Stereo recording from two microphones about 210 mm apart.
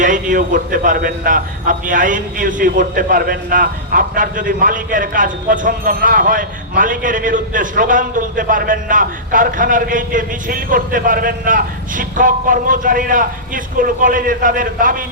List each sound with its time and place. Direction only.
0.0 s a man's voice: 40° right (ahead or behind)